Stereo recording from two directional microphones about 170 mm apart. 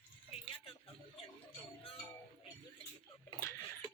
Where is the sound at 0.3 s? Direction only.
35° left (ahead or behind).